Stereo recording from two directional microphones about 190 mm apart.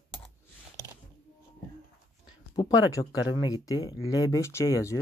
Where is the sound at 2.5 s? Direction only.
20° left (ahead or behind).